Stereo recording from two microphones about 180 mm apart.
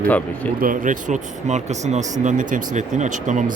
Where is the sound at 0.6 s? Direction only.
50° right (ahead or behind).